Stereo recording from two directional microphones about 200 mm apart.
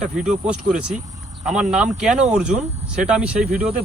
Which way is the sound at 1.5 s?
35° right (ahead or behind).